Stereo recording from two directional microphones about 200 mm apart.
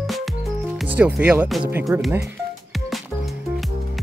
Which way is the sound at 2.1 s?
10° right (ahead or behind).